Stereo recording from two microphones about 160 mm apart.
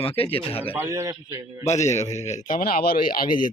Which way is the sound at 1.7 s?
45° left (ahead or behind).